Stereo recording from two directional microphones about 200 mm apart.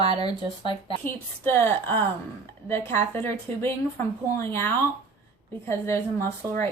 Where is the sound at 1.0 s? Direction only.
10° left (ahead or behind).